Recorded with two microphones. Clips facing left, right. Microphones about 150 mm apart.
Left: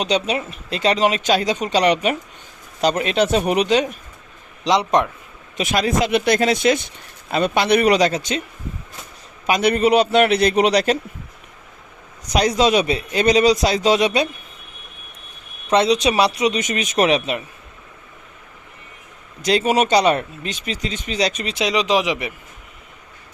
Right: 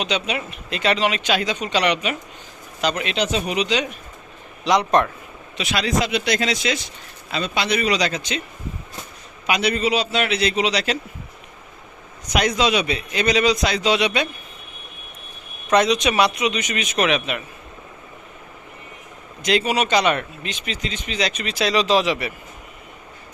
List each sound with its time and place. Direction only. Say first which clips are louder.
0.0 s a man's voice: left 4 dB; 40° left (ahead or behind)
4.6 s speech: even; 20° left (ahead or behind)
5.5 s a man's voice: left 3 dB; 45° left (ahead or behind)
9.5 s a man's voice: left 5 dB; 50° left (ahead or behind)
12.3 s speech: left 3 dB; 35° left (ahead or behind)
15.7 s speech: left 1 dB; 30° left (ahead or behind)
19.4 s speech: left 3 dB; 40° left (ahead or behind)
21.5 s speech: right 2 dB; 15° left (ahead or behind)